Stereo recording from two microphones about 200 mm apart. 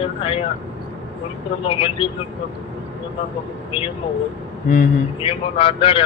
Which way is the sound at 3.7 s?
25° left (ahead or behind).